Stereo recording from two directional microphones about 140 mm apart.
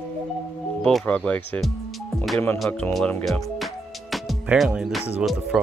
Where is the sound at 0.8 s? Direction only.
5° left (ahead or behind).